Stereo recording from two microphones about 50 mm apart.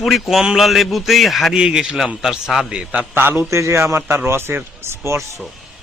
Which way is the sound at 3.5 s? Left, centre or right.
Right.